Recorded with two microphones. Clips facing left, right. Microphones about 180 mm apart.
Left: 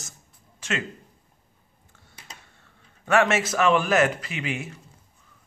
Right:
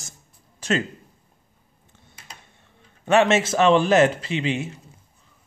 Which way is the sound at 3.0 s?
25° right (ahead or behind).